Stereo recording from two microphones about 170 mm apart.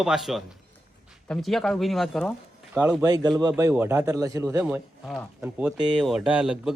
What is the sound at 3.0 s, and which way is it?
Speech, 20° right (ahead or behind).